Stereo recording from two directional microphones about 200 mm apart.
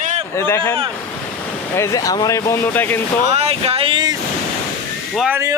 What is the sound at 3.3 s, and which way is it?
Speech, 30° right (ahead or behind).